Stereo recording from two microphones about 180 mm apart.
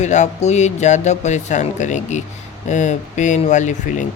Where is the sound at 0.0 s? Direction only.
40° left (ahead or behind).